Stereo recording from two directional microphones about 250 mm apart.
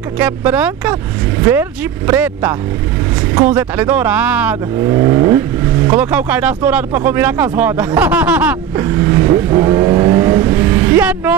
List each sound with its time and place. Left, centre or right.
0.2 s speech: centre